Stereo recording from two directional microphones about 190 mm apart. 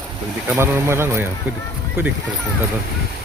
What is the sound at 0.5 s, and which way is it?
Speech, 15° right (ahead or behind).